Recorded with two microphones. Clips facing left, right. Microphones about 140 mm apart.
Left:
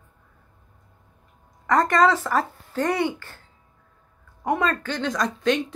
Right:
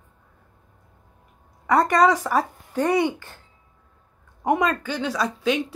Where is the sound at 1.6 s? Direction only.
10° right (ahead or behind).